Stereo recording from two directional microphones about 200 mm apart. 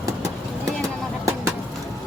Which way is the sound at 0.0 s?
15° right (ahead or behind).